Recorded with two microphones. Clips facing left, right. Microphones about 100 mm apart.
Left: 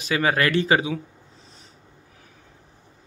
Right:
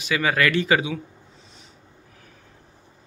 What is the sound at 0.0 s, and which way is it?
Speech, 35° left (ahead or behind).